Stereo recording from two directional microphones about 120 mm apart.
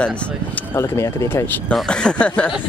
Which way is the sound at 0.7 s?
20° left (ahead or behind).